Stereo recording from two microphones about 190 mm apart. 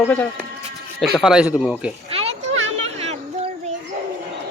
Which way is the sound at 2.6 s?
35° right (ahead or behind).